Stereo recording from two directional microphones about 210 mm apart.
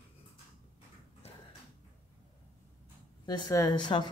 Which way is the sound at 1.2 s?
30° left (ahead or behind).